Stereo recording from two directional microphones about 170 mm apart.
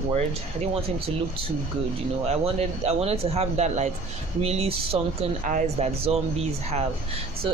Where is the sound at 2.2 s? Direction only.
40° right (ahead or behind).